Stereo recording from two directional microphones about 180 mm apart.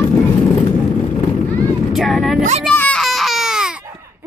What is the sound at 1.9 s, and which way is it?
Speech, centre (ahead or behind).